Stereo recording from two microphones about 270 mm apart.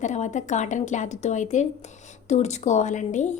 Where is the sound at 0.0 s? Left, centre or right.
Left.